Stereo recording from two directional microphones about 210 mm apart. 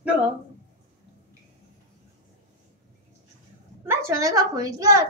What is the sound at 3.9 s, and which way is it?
A woman's voice, 15° right (ahead or behind).